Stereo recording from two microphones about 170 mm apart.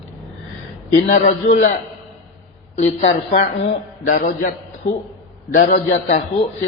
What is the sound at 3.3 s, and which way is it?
Speech, 40° left (ahead or behind).